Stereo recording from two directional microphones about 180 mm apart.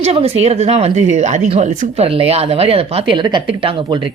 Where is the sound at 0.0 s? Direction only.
35° right (ahead or behind).